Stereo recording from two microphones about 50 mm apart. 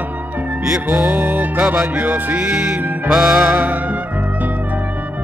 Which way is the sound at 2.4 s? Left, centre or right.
Centre.